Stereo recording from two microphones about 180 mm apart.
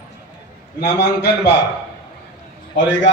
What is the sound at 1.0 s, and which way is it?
Speech, 70° left (ahead or behind).